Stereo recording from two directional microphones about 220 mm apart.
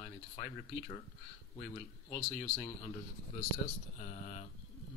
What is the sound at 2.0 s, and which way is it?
Speech, 20° left (ahead or behind).